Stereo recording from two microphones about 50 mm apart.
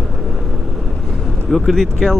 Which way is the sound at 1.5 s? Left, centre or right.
Centre.